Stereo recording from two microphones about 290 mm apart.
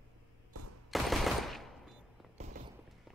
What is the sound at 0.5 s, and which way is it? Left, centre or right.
Fusillade, right.